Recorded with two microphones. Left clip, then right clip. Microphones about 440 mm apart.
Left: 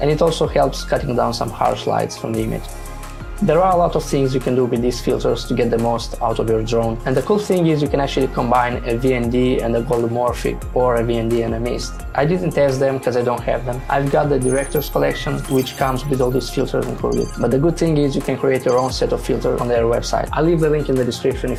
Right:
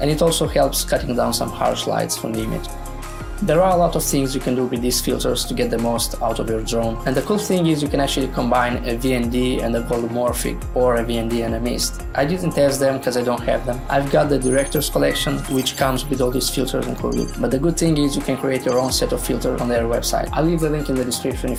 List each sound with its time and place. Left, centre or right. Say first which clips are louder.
0.0 s speech: left 2 dB; centre
3.4 s speech: left 1 dB; centre
16.8 s speech: left 3 dB; centre
17.4 s speech: left 2 dB; centre